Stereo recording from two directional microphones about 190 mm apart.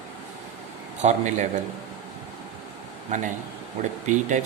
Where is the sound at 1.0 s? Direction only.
40° right (ahead or behind).